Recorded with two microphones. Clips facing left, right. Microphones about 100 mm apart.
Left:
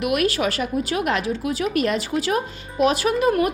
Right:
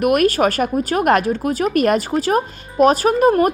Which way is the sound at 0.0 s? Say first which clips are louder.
Right 6 dB; 45° right (ahead or behind).